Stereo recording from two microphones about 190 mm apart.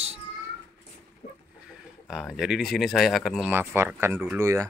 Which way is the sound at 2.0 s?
Centre (ahead or behind).